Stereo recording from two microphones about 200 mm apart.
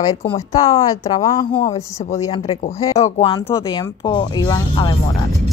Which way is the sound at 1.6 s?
30° left (ahead or behind).